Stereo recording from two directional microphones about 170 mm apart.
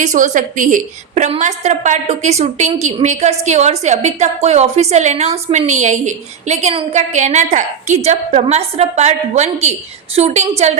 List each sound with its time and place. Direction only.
0.0 s a woman's voice: 50° right (ahead or behind)